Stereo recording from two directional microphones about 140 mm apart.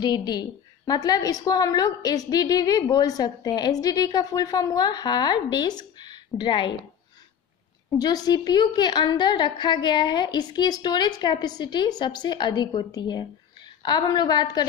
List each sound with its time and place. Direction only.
0.0 s a woman's voice: 30° left (ahead or behind)
8.0 s a woman's voice: 30° left (ahead or behind)